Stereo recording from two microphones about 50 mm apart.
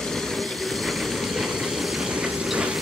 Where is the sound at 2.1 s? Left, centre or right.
Centre.